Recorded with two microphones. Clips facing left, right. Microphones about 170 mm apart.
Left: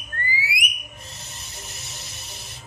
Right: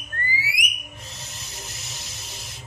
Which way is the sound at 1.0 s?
90° right.